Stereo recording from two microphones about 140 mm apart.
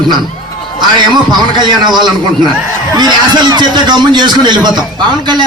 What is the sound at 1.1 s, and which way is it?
Speech, 30° right (ahead or behind).